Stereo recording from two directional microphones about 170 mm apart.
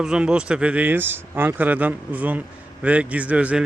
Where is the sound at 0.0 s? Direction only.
5° right (ahead or behind).